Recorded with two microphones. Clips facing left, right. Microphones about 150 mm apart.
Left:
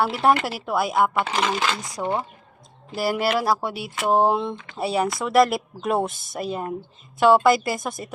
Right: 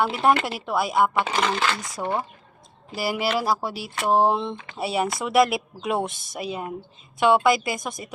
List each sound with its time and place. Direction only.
0.0 s speech: centre (ahead or behind)
1.5 s speech: 15° left (ahead or behind)
2.9 s speech: 5° right (ahead or behind)